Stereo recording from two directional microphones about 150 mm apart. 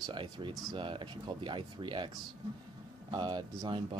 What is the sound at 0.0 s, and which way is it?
Speech, 30° right (ahead or behind).